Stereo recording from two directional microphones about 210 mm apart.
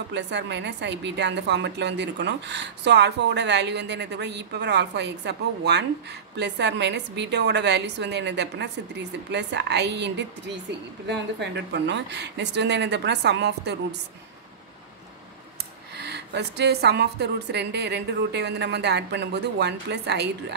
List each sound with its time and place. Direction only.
0.1 s a woman's voice: 55° right (ahead or behind)
16.0 s a woman's voice: 50° right (ahead or behind)